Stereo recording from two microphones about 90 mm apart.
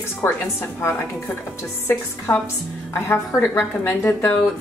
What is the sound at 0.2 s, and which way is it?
Speech, 30° left (ahead or behind).